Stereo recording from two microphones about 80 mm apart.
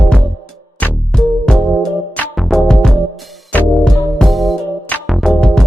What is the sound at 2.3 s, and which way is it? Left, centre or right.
Music, centre.